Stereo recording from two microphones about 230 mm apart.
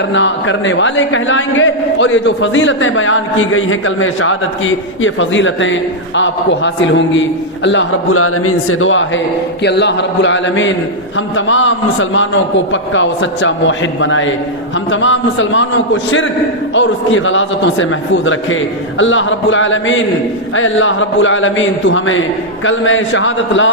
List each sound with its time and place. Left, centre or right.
0.1 s a man's voice: left